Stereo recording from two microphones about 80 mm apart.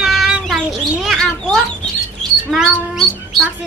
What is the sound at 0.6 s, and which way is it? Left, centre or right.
Speech, centre.